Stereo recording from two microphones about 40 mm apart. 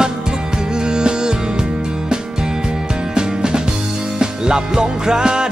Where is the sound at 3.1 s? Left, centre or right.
Centre.